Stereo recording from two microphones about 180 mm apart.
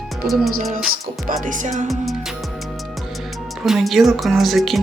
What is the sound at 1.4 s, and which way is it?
Music, 45° right (ahead or behind).